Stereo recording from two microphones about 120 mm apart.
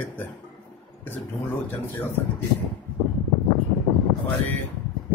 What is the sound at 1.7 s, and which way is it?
Speech, 15° left (ahead or behind).